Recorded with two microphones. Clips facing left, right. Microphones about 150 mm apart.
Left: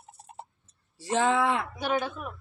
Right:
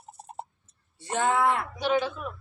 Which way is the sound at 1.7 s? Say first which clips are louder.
Right 3 dB; 50° left (ahead or behind).